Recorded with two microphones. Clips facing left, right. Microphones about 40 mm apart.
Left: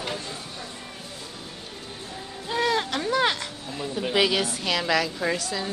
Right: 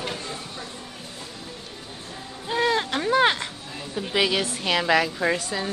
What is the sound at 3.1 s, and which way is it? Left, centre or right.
Speech, right.